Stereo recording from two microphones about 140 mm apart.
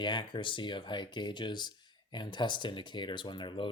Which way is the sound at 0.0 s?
35° left (ahead or behind).